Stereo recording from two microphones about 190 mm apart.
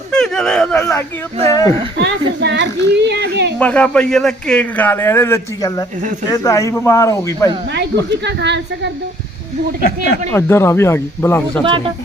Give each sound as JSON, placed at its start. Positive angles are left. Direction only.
{"t": 0.1, "sound": "a sound", "side_deg": 5}
{"t": 0.9, "sound": "a man's voice", "side_deg": 15}
{"t": 2.4, "sound": "a sound", "side_deg": -65}
{"t": 3.6, "sound": "a man's voice", "side_deg": 5}
{"t": 8.2, "sound": "a woman's voice", "side_deg": -65}
{"t": 9.8, "sound": "speech", "side_deg": 65}
{"t": 10.3, "sound": "a man's voice", "side_deg": 15}